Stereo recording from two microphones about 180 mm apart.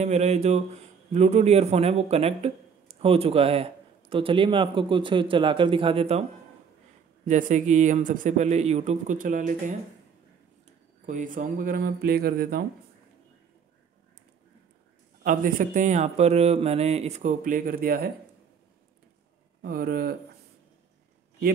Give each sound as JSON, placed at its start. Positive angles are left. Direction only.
{"t": 0.0, "sound": "a man's voice", "side_deg": -40}
{"t": 7.2, "sound": "speech", "side_deg": -45}
{"t": 11.1, "sound": "speech", "side_deg": -45}
{"t": 15.2, "sound": "speech", "side_deg": -45}
{"t": 19.6, "sound": "speech", "side_deg": -55}